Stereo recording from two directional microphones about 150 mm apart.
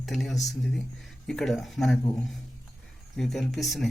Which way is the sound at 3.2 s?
Centre (ahead or behind).